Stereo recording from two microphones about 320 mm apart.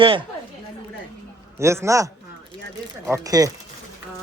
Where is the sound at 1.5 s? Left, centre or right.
Centre.